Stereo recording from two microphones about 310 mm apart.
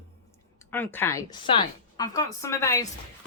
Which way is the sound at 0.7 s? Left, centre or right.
Centre.